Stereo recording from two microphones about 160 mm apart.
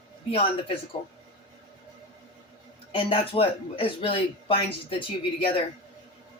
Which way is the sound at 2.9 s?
35° left (ahead or behind).